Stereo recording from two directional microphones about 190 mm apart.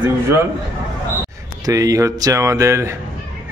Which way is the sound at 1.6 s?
15° right (ahead or behind).